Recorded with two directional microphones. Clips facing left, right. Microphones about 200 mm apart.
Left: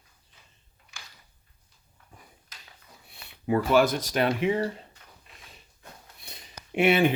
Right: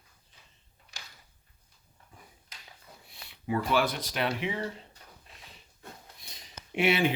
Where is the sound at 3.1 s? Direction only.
45° left (ahead or behind).